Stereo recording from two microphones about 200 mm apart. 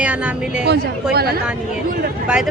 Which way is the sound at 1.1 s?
50° right (ahead or behind).